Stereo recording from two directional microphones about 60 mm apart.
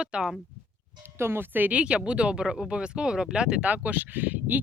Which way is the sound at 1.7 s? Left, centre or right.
Centre.